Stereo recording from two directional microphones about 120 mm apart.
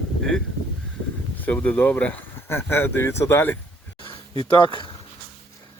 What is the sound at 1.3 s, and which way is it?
Speech, 15° left (ahead or behind).